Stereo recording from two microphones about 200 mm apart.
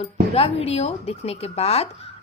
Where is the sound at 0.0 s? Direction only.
30° left (ahead or behind).